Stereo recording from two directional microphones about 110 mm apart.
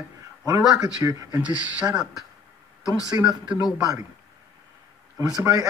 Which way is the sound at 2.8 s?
35° left (ahead or behind).